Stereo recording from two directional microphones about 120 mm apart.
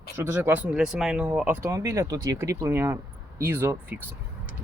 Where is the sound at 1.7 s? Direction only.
30° right (ahead or behind).